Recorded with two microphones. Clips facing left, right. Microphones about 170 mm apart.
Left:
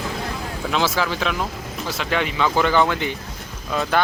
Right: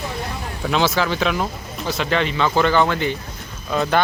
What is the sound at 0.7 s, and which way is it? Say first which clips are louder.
Speech: right 3 dB; 5° left (ahead or behind).